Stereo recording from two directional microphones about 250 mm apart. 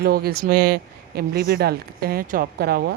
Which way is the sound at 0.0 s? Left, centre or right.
Right.